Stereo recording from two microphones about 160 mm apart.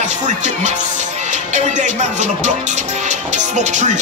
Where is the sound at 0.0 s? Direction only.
50° right (ahead or behind).